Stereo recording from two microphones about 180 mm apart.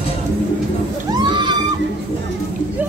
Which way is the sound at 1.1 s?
25° right (ahead or behind).